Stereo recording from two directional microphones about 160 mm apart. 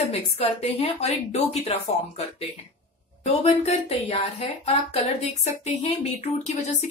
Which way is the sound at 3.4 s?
45° left (ahead or behind).